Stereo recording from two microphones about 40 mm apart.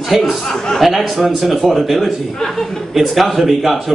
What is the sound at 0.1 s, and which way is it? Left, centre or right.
A woman's voice, centre.